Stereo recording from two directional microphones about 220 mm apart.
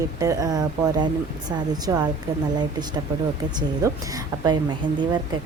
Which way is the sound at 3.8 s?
15° right (ahead or behind).